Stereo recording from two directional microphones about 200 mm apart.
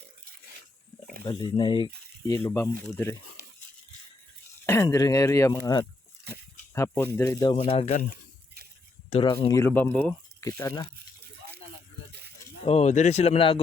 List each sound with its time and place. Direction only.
1.2 s speech: 20° left (ahead or behind)
2.2 s speech: 10° left (ahead or behind)
3.4 s a sound: 55° right (ahead or behind)
4.6 s speech: 10° left (ahead or behind)
7.5 s speech: 35° left (ahead or behind)
9.0 s speech: 30° left (ahead or behind)
9.5 s speech: 15° left (ahead or behind)
10.6 s speech: 20° left (ahead or behind)
12.6 s speech: 35° left (ahead or behind)